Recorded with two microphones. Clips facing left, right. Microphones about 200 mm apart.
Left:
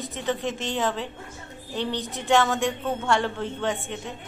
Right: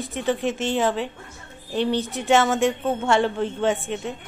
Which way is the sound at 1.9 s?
20° left (ahead or behind).